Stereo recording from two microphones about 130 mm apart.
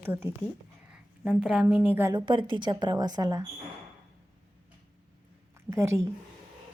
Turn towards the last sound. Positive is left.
turn(degrees=-20)  # may be behind; listen again after turning